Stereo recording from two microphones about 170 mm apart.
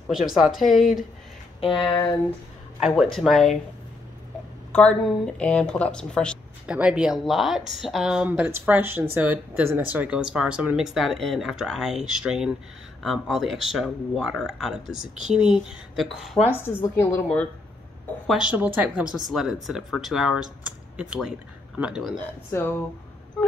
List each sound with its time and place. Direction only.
0.1 s speech: centre (ahead or behind)
1.6 s a sound: 30° left (ahead or behind)
2.8 s speech: 5° right (ahead or behind)
4.7 s speech: 5° left (ahead or behind)
6.7 s speech: 5° right (ahead or behind)
16.4 s a woman's voice: 15° left (ahead or behind)
18.2 s speech: 5° right (ahead or behind)
22.5 s a woman's voice: 15° left (ahead or behind)